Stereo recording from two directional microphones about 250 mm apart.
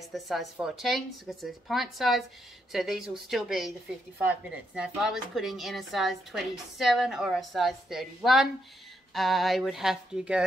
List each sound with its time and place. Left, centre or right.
0.1 s a woman's voice: centre